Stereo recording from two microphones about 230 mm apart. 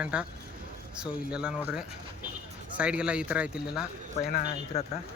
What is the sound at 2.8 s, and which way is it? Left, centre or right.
Speech, centre.